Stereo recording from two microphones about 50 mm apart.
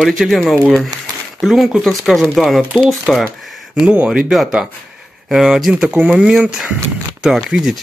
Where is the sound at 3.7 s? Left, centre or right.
Right.